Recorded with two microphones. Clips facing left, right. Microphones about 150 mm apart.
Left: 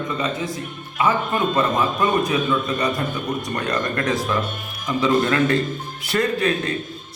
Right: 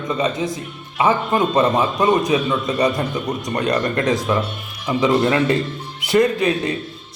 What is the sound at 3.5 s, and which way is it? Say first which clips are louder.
A man's voice: right 6 dB; 25° right (ahead or behind).